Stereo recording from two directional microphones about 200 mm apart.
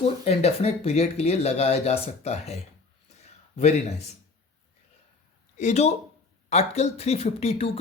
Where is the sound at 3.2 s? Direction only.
35° left (ahead or behind).